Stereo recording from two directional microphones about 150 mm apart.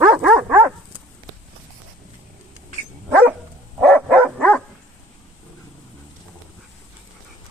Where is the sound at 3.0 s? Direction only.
10° right (ahead or behind).